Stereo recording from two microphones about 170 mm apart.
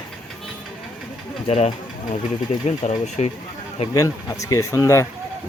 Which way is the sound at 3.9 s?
20° left (ahead or behind).